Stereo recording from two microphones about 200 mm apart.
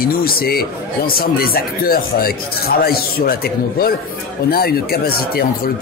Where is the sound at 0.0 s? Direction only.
45° left (ahead or behind).